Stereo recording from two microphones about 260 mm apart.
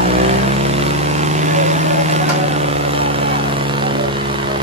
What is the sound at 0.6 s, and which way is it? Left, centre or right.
Vehicle, right.